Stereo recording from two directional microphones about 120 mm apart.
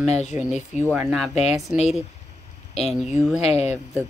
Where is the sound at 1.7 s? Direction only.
10° right (ahead or behind).